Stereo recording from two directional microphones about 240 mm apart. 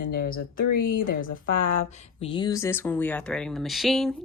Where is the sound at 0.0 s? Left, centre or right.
Left.